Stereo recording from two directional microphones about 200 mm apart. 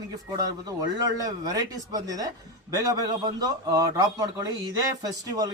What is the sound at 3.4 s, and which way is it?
A man's voice, 20° right (ahead or behind).